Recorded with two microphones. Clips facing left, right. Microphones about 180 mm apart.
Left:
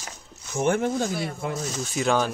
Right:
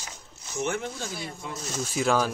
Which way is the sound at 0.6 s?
50° left (ahead or behind).